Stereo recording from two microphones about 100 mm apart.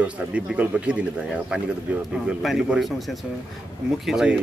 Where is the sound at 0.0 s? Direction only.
10° right (ahead or behind).